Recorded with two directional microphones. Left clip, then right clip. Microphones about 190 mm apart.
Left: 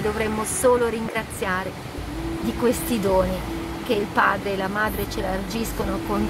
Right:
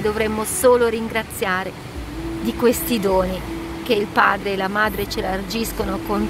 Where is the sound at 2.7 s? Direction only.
15° right (ahead or behind).